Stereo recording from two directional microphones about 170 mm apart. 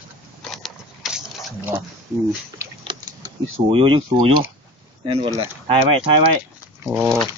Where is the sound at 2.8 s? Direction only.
30° right (ahead or behind).